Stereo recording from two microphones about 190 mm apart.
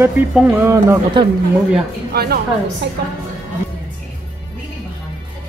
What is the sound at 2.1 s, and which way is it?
Speech, 55° right (ahead or behind).